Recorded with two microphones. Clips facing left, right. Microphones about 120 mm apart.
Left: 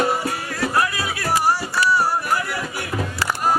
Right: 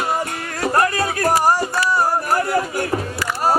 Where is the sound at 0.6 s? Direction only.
45° right (ahead or behind).